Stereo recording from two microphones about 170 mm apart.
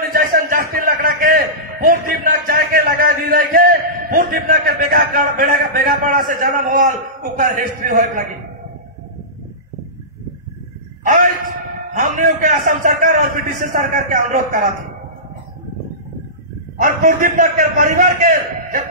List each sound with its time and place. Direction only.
0.1 s a sound: 55° right (ahead or behind)
11.1 s a man's voice: 50° right (ahead or behind)
16.8 s a man's voice: 50° right (ahead or behind)